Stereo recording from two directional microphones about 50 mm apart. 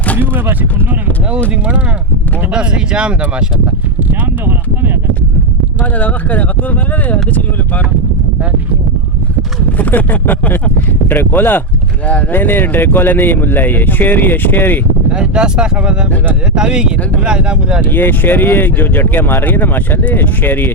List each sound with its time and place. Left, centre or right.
2.5 s speech: centre
5.8 s speech: left
9.7 s speech: left
15.1 s speech: centre
17.9 s speech: left